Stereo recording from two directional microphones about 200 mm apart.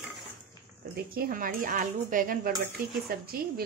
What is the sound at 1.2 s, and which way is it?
Speech, 45° right (ahead or behind).